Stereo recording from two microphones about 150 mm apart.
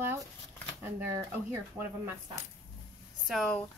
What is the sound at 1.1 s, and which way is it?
Speech, 15° right (ahead or behind).